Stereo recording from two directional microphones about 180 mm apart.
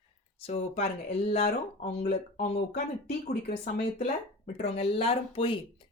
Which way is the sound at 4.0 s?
35° left (ahead or behind).